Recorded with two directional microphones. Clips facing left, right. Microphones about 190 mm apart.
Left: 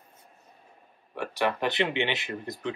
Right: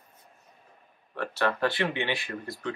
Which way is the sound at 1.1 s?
15° left (ahead or behind).